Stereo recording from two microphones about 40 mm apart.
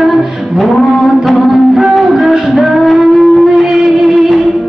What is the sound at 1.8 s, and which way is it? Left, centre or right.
Music, centre.